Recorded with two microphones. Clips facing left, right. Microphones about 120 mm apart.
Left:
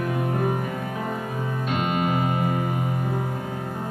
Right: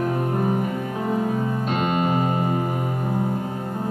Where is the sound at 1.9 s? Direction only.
35° right (ahead or behind).